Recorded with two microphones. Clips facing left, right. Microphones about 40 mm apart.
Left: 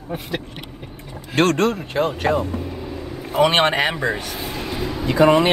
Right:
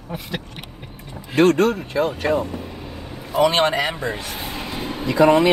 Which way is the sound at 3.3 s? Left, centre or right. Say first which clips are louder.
Left 1 dB; left.